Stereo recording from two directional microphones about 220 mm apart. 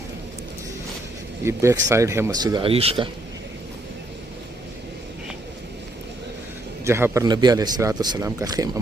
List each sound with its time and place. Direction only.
1.5 s a man's voice: 15° right (ahead or behind)
6.8 s a man's voice: 10° right (ahead or behind)